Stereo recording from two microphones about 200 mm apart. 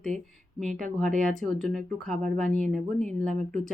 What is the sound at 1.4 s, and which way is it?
Speech, centre (ahead or behind).